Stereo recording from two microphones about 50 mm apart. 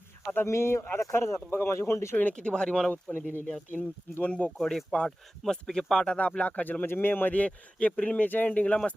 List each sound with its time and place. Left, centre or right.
0.4 s speech: left
0.9 s speech: left
2.3 s speech: centre
2.9 s speech: left
3.4 s speech: centre
4.5 s speech: centre
6.3 s speech: left
6.8 s speech: left
8.4 s speech: left